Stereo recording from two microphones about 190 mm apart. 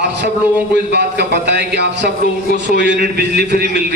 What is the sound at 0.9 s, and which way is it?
A man's voice, 60° right (ahead or behind).